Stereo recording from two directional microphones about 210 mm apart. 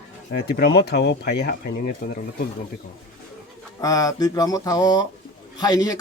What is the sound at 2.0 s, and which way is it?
Speech, 40° left (ahead or behind).